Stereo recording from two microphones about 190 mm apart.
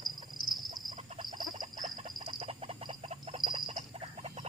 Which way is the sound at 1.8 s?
40° right (ahead or behind).